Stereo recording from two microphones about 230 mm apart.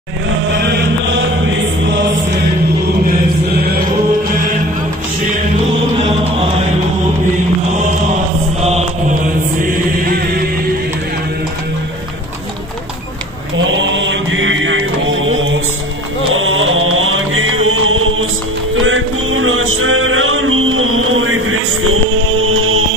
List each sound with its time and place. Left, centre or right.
0.6 s chant: right
8.5 s mantra: right
9.6 s chant: right
13.6 s mantra: right
16.3 s music: right